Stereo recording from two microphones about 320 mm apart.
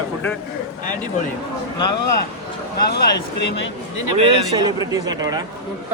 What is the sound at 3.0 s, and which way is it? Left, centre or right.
Speech, left.